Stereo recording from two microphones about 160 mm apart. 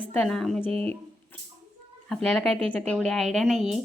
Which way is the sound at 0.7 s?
40° right (ahead or behind).